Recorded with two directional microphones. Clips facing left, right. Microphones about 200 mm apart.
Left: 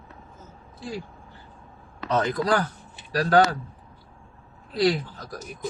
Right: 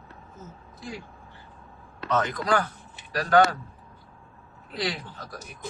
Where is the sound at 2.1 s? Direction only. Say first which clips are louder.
Left 2 dB; 35° left (ahead or behind).